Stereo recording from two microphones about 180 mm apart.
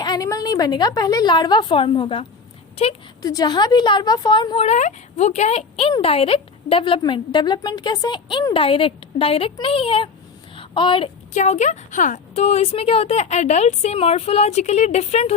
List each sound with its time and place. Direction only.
0.0 s a woman's voice: 20° left (ahead or behind)
10.5 s a sound: 30° left (ahead or behind)
11.3 s speech: 40° left (ahead or behind)